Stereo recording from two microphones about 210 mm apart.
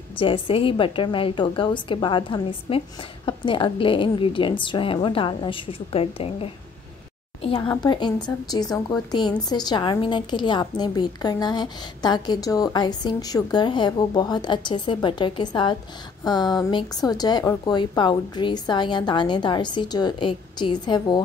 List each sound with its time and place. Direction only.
0.2 s a woman's voice: 25° left (ahead or behind)